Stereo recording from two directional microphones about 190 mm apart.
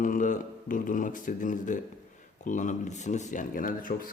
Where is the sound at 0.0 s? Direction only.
45° left (ahead or behind).